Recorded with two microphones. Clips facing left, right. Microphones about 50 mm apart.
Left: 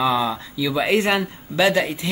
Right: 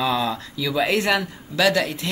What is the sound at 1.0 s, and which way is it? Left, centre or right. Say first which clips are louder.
Speech: left 1 dB; left.